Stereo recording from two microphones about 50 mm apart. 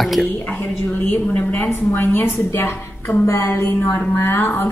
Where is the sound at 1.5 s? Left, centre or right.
Left.